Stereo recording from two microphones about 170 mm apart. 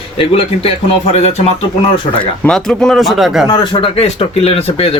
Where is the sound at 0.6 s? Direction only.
35° left (ahead or behind).